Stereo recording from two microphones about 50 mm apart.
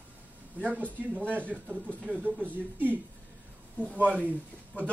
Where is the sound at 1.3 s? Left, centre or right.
Right.